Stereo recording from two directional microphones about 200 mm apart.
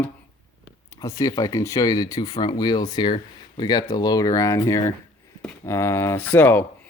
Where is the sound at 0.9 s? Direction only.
15° left (ahead or behind).